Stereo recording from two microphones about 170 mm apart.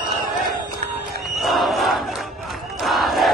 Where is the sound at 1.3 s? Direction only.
Centre (ahead or behind).